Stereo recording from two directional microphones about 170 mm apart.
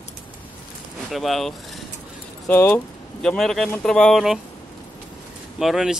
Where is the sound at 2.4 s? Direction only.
15° left (ahead or behind).